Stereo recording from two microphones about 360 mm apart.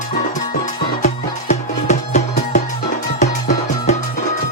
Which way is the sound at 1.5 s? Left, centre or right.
Centre.